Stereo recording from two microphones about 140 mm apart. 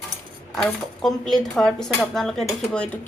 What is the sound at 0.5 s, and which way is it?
Speech, 5° left (ahead or behind).